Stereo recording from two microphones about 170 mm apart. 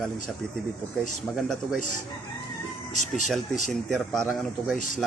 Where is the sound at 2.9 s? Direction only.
45° left (ahead or behind).